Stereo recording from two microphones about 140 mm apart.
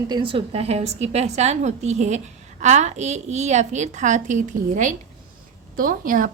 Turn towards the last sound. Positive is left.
turn(degrees=-75)  # may be behind; listen again after turning